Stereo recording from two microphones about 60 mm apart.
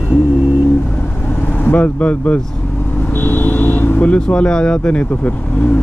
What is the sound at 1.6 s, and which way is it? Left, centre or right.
Speech, left.